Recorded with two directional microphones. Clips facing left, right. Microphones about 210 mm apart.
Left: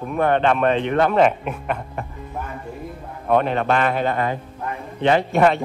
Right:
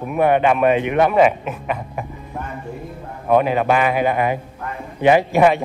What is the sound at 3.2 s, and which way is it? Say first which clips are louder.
Speech: right 3 dB; 5° right (ahead or behind).